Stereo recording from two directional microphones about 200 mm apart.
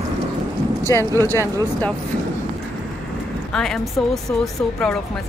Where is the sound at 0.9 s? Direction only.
15° left (ahead or behind).